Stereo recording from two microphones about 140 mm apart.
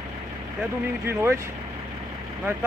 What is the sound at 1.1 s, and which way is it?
Speech, 20° right (ahead or behind).